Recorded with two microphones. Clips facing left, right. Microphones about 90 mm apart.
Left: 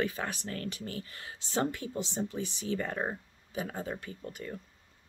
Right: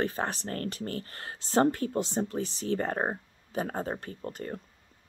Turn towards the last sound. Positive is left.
turn(degrees=-45)  # may be behind; listen again after turning